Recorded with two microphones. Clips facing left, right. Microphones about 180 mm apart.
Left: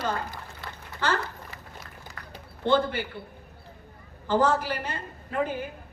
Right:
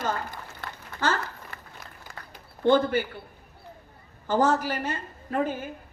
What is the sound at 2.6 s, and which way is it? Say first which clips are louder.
Speech: right 3 dB; 45° right (ahead or behind).